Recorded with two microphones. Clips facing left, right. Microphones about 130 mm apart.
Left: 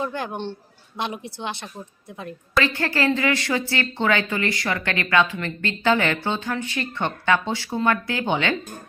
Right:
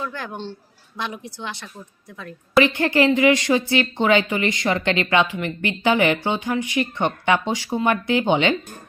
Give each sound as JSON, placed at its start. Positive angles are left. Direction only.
{"t": 0.0, "sound": "speech", "side_deg": 20}
{"t": 2.6, "sound": "a woman's voice", "side_deg": -20}